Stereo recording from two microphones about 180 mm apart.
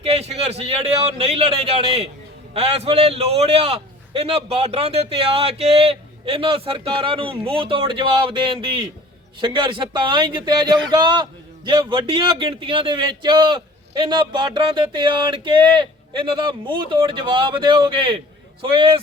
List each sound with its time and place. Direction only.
0.0 s a man's voice: 35° right (ahead or behind)